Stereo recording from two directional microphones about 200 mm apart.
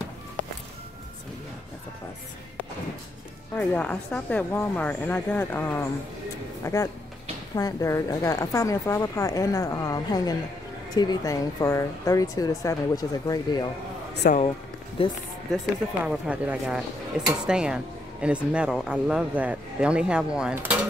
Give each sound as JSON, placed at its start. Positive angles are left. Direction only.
{"t": 3.5, "sound": "speech", "side_deg": 5}
{"t": 14.2, "sound": "speech", "side_deg": 50}
{"t": 15.0, "sound": "speech", "side_deg": 30}
{"t": 15.5, "sound": "speech", "side_deg": -5}